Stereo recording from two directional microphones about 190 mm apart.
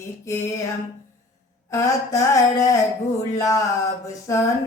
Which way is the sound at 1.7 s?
15° left (ahead or behind).